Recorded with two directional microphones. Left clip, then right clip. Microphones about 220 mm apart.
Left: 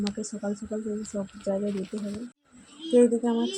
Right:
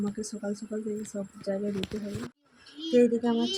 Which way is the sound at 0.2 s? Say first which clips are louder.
Left 2 dB; 5° right (ahead or behind).